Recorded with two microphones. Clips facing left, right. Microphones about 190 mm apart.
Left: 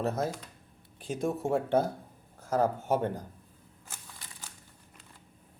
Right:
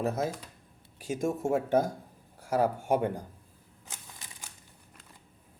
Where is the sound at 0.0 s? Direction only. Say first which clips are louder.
Even; 10° right (ahead or behind).